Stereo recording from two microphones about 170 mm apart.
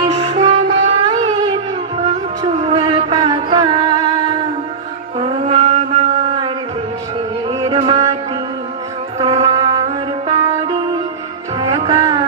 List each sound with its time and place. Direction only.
0.0 s music: 30° right (ahead or behind)
1.0 s a sound: 25° right (ahead or behind)
2.4 s music: 35° right (ahead or behind)
5.2 s mantra: 40° right (ahead or behind)
7.6 s music: 30° right (ahead or behind)
9.2 s music: 25° right (ahead or behind)